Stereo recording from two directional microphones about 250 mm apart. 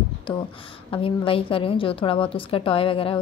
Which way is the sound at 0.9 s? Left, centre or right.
Left.